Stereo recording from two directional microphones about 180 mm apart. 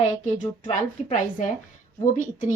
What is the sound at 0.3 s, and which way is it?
A woman's voice, 45° left (ahead or behind).